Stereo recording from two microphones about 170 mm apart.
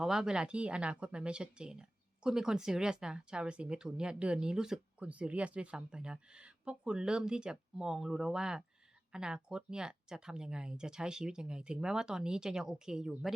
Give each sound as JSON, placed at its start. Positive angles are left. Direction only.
{"t": 0.0, "sound": "speech", "side_deg": -5}